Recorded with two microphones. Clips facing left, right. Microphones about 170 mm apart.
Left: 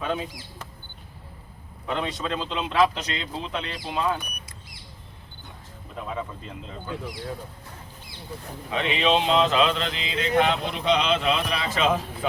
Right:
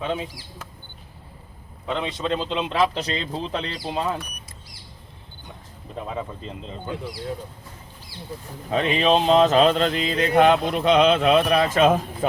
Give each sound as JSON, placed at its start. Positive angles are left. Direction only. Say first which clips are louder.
{"t": 0.0, "sound": "speech", "louder": "right 1 dB", "side_deg": -25}
{"t": 2.0, "sound": "speech", "louder": "right 4 dB", "side_deg": -25}
{"t": 6.1, "sound": "speech", "louder": "right 2 dB", "side_deg": -25}
{"t": 8.7, "sound": "speech", "louder": "right 3 dB", "side_deg": -40}